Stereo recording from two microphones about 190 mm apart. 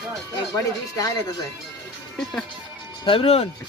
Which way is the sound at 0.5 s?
20° left (ahead or behind).